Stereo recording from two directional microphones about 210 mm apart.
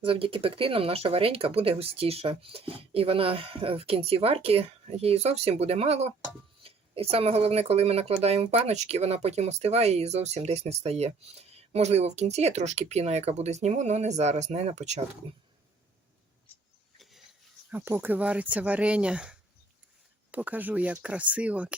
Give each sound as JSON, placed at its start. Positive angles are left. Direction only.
{"t": 0.0, "sound": "speech", "side_deg": -25}
{"t": 17.0, "sound": "a sound", "side_deg": 0}
{"t": 17.7, "sound": "speech", "side_deg": -10}